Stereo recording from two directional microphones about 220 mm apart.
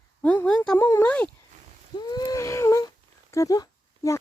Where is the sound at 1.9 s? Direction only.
20° left (ahead or behind).